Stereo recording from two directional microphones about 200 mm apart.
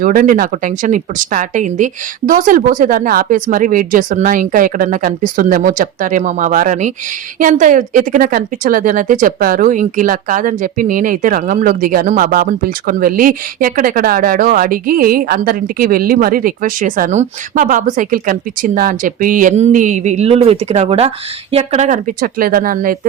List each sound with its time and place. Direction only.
0.0 s a woman's voice: 45° right (ahead or behind)